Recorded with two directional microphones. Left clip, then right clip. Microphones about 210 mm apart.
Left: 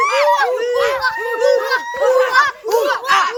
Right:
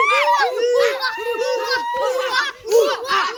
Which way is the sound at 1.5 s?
10° left (ahead or behind).